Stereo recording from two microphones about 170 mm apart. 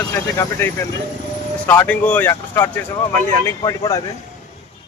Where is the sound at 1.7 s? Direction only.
10° left (ahead or behind).